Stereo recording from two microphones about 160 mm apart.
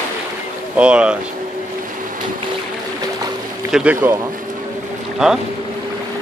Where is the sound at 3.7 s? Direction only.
10° right (ahead or behind).